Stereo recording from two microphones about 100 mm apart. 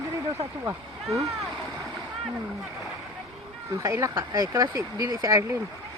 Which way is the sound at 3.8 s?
35° right (ahead or behind).